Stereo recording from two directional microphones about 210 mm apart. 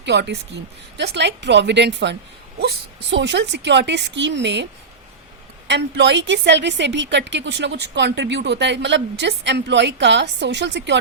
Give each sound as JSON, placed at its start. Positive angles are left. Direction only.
{"t": 0.0, "sound": "a woman's voice", "side_deg": -55}